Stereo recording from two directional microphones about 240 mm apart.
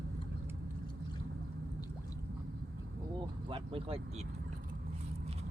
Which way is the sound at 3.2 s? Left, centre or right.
Right.